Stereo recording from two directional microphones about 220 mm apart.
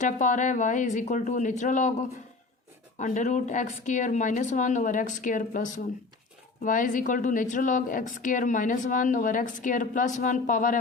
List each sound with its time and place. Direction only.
0.0 s speech: 35° left (ahead or behind)